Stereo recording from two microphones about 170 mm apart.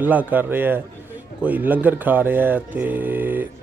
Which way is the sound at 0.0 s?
10° right (ahead or behind).